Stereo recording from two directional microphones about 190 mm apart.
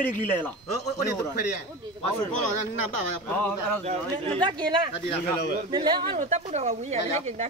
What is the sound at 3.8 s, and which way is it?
A man's voice, 35° right (ahead or behind).